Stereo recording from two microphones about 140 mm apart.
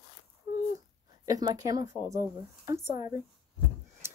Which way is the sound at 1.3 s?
25° right (ahead or behind).